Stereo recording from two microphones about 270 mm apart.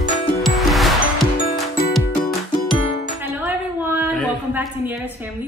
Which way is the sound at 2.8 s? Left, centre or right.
Left.